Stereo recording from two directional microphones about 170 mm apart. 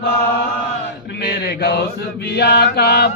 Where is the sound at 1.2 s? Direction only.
75° left (ahead or behind).